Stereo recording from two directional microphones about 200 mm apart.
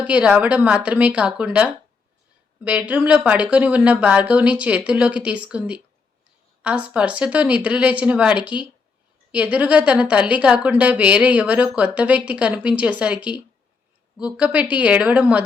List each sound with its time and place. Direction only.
0.0 s a woman's voice: 5° right (ahead or behind)